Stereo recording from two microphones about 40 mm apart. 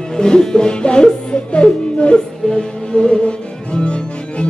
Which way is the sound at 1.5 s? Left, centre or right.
Left.